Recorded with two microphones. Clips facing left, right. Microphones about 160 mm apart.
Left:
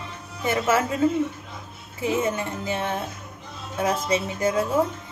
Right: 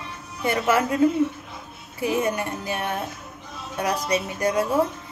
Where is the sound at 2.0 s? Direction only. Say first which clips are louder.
Right 1 dB; 25° left (ahead or behind).